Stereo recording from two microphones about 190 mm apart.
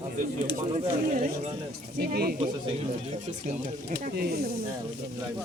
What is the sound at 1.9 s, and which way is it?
Speech, 55° right (ahead or behind).